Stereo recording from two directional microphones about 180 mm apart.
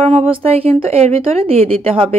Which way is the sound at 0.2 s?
30° right (ahead or behind).